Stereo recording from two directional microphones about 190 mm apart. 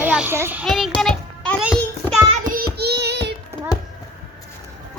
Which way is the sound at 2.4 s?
50° right (ahead or behind).